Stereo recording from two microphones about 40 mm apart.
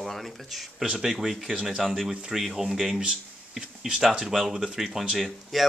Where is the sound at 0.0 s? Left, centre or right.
Centre.